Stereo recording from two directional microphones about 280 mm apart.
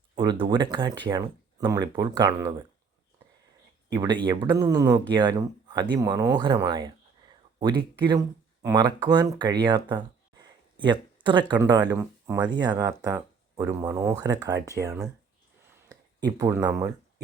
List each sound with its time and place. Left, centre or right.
0.2 s speech: centre
3.9 s speech: centre